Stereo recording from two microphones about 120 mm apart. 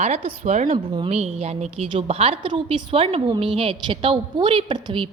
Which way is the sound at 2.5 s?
40° right (ahead or behind).